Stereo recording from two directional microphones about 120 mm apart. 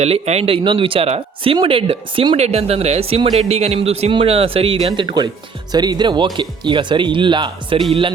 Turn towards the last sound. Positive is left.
turn(degrees=-40)  # may be behind; listen again after turning